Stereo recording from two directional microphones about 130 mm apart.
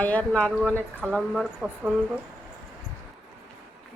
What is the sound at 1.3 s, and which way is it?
Speech, 5° right (ahead or behind).